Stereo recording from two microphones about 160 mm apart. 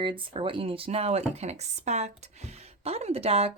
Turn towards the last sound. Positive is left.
turn(degrees=-40)  # may be behind; listen again after turning